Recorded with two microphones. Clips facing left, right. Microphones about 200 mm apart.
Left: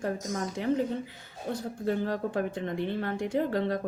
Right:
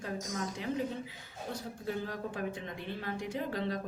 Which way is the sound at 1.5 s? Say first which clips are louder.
Left 8 dB; 60° left (ahead or behind).